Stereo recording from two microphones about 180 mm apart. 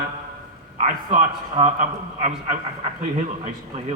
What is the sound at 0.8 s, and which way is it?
A man's voice, 40° right (ahead or behind).